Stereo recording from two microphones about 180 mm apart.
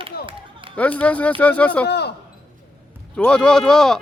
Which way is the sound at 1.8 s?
65° left (ahead or behind).